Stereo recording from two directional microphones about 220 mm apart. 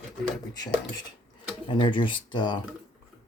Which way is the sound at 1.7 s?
20° left (ahead or behind).